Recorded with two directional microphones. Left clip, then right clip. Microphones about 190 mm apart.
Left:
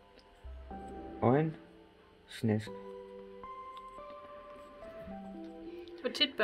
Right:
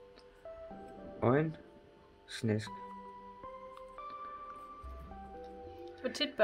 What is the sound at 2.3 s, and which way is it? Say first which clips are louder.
Speech: left 1 dB; 20° left (ahead or behind).